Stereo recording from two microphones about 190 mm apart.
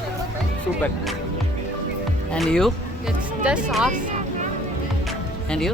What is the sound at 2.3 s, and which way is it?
Speech, centre (ahead or behind).